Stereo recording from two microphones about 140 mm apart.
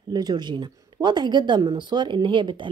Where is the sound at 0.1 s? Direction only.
30° right (ahead or behind).